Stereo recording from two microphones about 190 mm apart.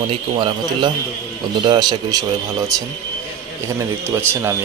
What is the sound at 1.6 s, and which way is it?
Speech, 20° right (ahead or behind).